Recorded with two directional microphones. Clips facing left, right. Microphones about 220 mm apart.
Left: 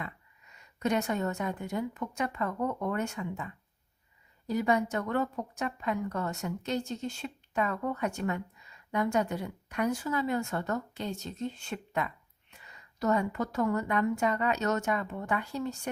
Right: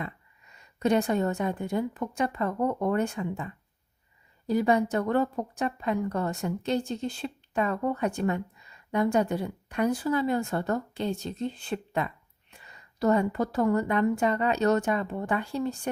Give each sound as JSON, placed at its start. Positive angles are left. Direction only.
{"t": 0.5, "sound": "a woman's voice", "side_deg": -30}